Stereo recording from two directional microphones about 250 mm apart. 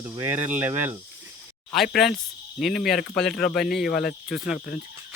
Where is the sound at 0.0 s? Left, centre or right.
Centre.